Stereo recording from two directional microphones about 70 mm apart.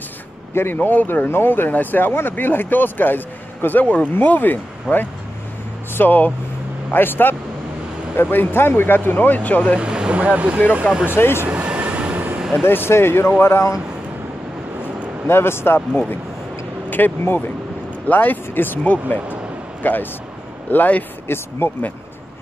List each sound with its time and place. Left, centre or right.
0.6 s speech: left
4.9 s speech: centre
5.9 s speech: left
9.8 s speech: centre
11.5 s vehicle: right
12.4 s a sound: centre
12.6 s speech: left
15.2 s speech: left